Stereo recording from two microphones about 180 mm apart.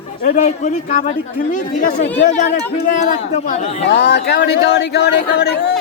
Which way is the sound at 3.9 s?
70° left (ahead or behind).